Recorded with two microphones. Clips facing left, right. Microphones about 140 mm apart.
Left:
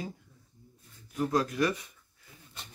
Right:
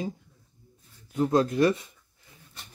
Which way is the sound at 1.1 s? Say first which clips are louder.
Right 6 dB; 25° right (ahead or behind).